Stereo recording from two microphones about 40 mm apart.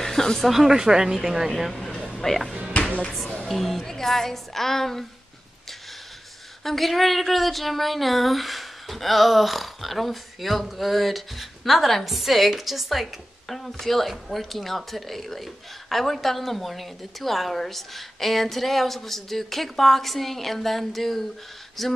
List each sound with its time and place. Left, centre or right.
0.0 s a sound: centre
0.5 s speech: centre
2.1 s a woman's voice: centre
6.6 s speech: centre
13.5 s speech: centre